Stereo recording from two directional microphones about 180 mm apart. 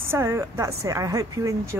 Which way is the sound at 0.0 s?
15° right (ahead or behind).